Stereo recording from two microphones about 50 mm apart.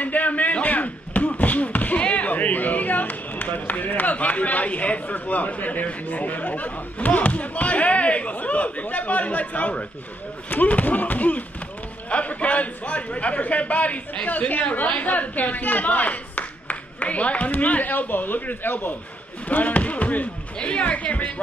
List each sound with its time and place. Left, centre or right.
0.0 s a man's voice: left